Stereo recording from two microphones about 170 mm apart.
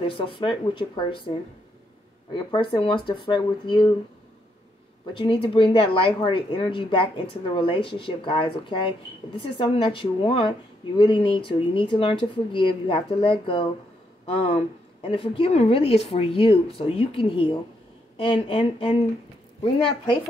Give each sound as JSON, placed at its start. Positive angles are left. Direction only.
{"t": 0.0, "sound": "speech", "side_deg": 30}
{"t": 2.3, "sound": "speech", "side_deg": 30}
{"t": 5.1, "sound": "speech", "side_deg": 30}